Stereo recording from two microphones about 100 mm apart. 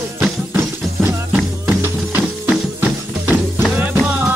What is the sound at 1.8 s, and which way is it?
Music, 20° right (ahead or behind).